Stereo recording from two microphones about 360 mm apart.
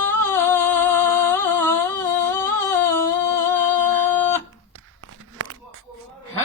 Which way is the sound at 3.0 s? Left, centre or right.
Centre.